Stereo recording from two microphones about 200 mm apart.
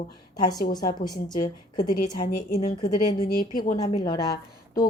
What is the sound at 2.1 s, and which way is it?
Speech, 45° left (ahead or behind).